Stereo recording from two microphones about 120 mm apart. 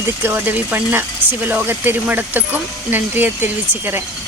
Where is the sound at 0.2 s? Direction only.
15° right (ahead or behind).